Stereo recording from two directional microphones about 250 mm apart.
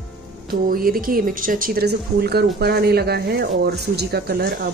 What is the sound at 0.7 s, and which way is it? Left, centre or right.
Speech, right.